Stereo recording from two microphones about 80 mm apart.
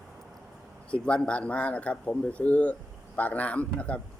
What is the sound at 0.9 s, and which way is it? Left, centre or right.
A man's voice, centre.